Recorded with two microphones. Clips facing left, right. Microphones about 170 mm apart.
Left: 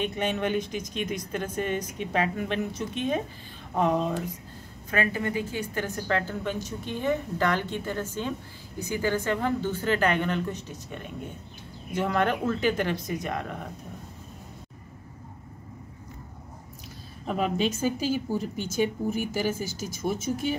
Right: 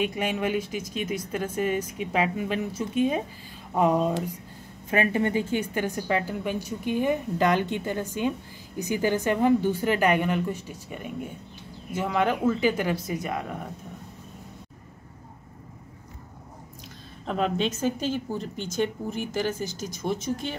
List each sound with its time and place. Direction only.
0.0 s a woman's voice: 10° right (ahead or behind)
4.9 s a woman's voice: 25° right (ahead or behind); by 13.7 s 5° right (ahead or behind)
17.3 s a woman's voice: 5° left (ahead or behind)